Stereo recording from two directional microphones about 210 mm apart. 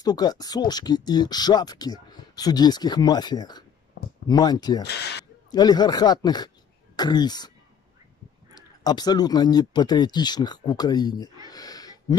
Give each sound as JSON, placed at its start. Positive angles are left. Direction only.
{"t": 0.0, "sound": "speech", "side_deg": 20}
{"t": 8.5, "sound": "speech", "side_deg": 20}
{"t": 11.5, "sound": "a sound", "side_deg": 20}